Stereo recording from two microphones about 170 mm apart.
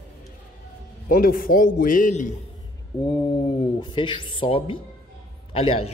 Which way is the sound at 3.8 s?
30° left (ahead or behind).